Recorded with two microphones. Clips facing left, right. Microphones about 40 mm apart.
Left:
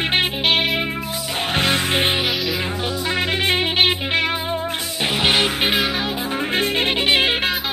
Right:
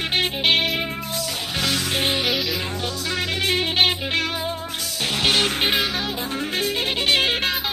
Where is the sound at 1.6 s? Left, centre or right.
Left.